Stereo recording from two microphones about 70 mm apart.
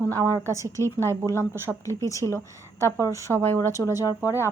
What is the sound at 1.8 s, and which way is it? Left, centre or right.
A woman's voice, left.